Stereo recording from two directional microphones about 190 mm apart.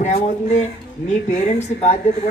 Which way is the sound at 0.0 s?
35° left (ahead or behind).